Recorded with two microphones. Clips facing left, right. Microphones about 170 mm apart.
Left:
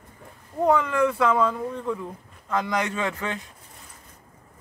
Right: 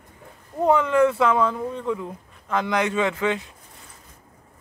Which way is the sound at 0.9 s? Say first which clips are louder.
Right 3 dB; 25° right (ahead or behind).